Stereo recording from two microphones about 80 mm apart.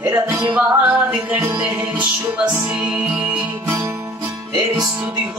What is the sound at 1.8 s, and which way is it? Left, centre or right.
Speech, centre.